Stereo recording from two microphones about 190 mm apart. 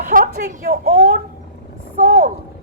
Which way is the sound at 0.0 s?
45° right (ahead or behind).